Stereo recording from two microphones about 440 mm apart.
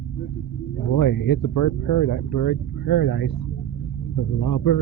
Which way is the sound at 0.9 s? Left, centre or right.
Left.